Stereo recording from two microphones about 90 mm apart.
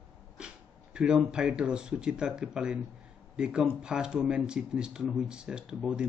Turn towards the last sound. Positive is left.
turn(degrees=-10)  # may be behind; listen again after turning